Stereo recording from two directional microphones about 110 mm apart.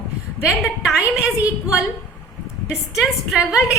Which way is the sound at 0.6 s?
5° right (ahead or behind).